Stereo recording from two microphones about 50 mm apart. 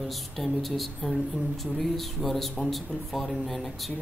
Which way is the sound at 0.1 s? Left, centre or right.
Centre.